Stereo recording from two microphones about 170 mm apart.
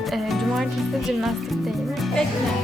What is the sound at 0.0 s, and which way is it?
Music, centre (ahead or behind).